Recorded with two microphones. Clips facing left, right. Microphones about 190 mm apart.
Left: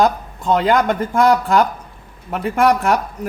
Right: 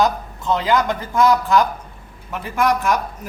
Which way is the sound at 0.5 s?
55° left (ahead or behind).